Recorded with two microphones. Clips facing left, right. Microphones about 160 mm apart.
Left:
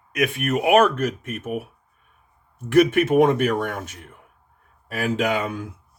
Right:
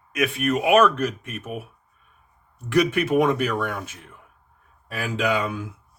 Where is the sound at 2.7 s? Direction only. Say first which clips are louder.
Left 4 dB; 50° left (ahead or behind).